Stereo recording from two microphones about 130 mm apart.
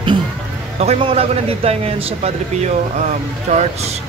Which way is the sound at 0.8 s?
50° right (ahead or behind).